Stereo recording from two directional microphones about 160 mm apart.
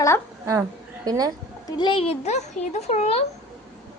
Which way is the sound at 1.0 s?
25° right (ahead or behind).